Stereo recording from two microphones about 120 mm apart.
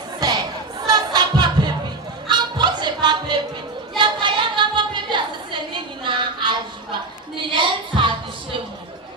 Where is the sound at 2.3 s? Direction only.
35° right (ahead or behind).